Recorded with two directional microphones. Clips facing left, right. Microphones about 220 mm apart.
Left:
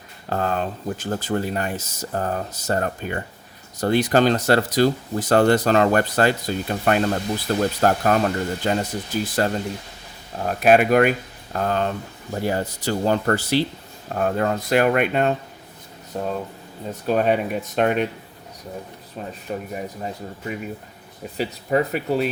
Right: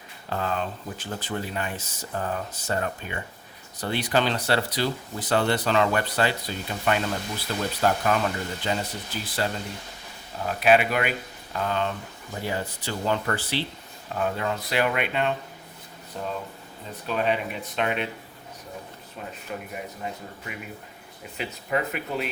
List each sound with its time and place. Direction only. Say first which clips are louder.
0.3 s speech: left 5 dB; 45° left (ahead or behind)
19.5 s speech: left 7 dB; 35° left (ahead or behind)